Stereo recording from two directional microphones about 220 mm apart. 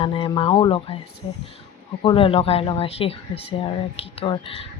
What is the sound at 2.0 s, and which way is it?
Speech, 25° left (ahead or behind).